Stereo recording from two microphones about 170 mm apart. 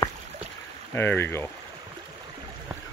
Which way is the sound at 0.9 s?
15° left (ahead or behind).